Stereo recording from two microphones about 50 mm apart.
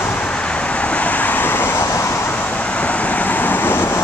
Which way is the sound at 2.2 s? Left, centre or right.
Left.